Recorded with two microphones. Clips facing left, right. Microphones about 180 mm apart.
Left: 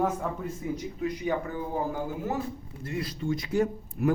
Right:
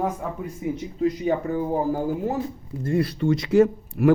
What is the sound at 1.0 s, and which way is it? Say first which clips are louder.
Speech: right 7 dB; 35° right (ahead or behind).